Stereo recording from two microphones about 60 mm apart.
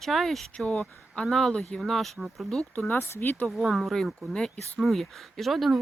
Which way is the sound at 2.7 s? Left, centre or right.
Left.